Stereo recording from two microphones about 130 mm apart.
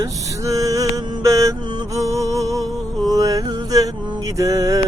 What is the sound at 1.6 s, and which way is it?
Music, 35° right (ahead or behind).